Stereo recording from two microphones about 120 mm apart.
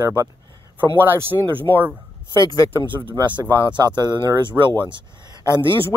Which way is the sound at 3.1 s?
40° right (ahead or behind).